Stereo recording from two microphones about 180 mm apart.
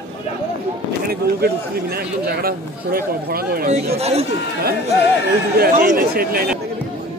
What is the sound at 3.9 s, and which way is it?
Speech, 35° right (ahead or behind).